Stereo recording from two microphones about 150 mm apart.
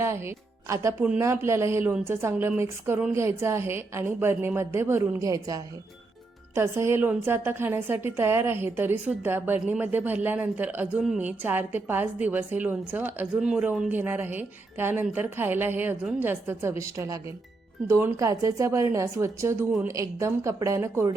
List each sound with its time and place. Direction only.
0.0 s a woman's voice: 20° right (ahead or behind)